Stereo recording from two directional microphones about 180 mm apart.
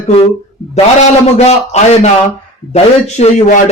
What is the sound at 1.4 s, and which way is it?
A woman's voice, 35° left (ahead or behind).